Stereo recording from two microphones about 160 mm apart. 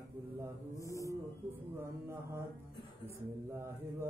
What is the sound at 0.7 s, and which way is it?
Mantra, 20° left (ahead or behind).